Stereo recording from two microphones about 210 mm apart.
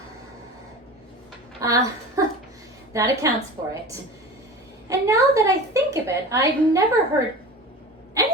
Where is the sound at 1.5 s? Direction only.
15° right (ahead or behind).